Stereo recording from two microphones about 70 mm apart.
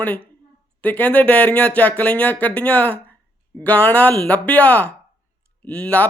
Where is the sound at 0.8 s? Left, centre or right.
Left.